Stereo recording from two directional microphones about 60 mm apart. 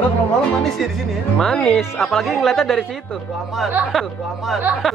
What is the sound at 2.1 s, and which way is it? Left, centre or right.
Speech, centre.